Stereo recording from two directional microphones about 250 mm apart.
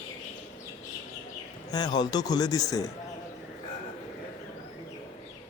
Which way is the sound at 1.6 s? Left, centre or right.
Centre.